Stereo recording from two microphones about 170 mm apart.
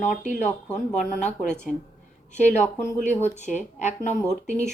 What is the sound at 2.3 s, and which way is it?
Speech, 45° left (ahead or behind).